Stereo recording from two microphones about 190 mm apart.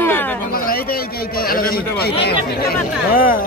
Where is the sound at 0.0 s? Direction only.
10° left (ahead or behind).